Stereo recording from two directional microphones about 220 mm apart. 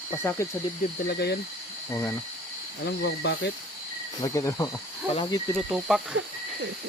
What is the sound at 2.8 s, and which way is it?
Speech, 50° left (ahead or behind).